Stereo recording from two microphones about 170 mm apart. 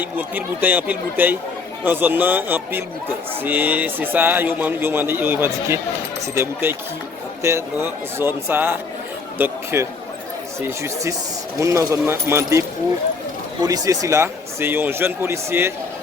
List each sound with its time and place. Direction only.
0.0 s a man's voice: 10° right (ahead or behind)
10.6 s a man's voice: 15° right (ahead or behind)